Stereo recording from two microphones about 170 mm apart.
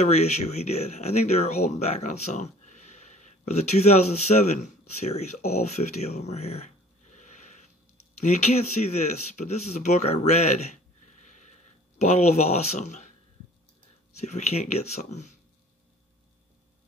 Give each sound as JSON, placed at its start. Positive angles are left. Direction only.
{"t": 0.0, "sound": "speech", "side_deg": 40}
{"t": 7.1, "sound": "sniff", "side_deg": 45}
{"t": 8.2, "sound": "speech", "side_deg": 40}
{"t": 12.0, "sound": "speech", "side_deg": 40}
{"t": 14.2, "sound": "speech", "side_deg": 40}